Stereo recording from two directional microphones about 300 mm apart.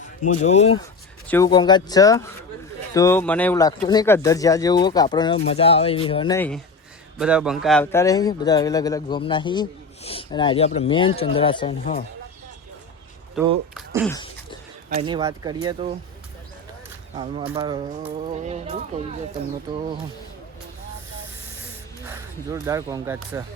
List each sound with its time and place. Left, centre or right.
0.4 s speech: left
7.2 s speech: centre
13.4 s speech: centre
13.7 s beatboxing: centre
14.8 s speech: centre
17.5 s speech: centre
22.1 s speech: centre